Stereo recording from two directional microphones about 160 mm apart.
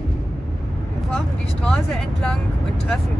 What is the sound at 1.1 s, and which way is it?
Speech, 5° left (ahead or behind).